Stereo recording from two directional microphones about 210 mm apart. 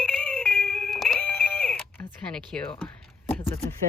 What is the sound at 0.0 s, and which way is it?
Music, 5° left (ahead or behind).